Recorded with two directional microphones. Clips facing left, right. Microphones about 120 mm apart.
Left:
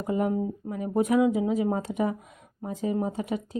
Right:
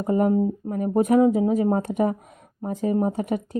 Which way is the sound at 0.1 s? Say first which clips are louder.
Right 6 dB; 45° right (ahead or behind).